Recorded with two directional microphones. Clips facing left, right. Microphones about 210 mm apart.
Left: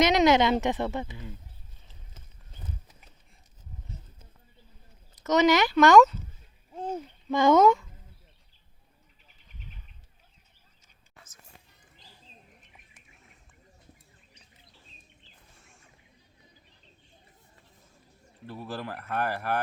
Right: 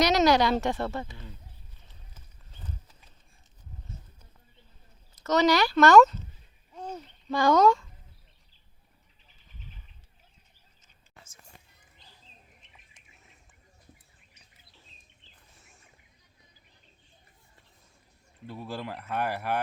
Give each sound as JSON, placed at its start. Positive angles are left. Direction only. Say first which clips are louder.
{"t": 0.0, "sound": "speech", "louder": "left 1 dB", "side_deg": 20}
{"t": 5.1, "sound": "speech", "louder": "left 1 dB", "side_deg": 15}
{"t": 7.3, "sound": "speech", "louder": "left 2 dB", "side_deg": 20}
{"t": 18.6, "sound": "speech", "louder": "even", "side_deg": -10}